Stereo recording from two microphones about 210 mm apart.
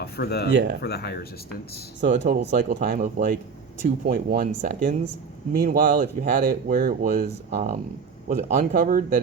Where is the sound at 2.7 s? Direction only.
35° right (ahead or behind).